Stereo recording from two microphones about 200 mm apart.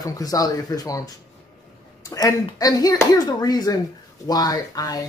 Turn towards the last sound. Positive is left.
turn(degrees=20)  # may be behind; listen again after turning